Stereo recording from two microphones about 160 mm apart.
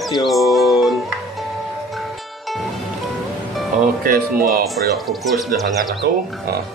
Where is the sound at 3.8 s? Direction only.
65° right (ahead or behind).